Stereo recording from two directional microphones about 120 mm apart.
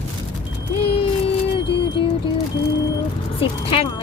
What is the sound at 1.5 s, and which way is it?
Music, 45° left (ahead or behind).